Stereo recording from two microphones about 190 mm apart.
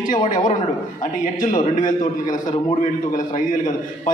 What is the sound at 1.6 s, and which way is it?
A man's voice, 45° left (ahead or behind).